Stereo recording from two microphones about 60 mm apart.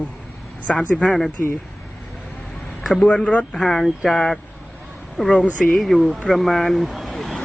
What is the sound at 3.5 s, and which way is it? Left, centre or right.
Speech, centre.